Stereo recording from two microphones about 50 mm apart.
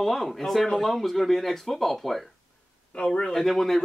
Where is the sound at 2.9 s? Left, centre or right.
Centre.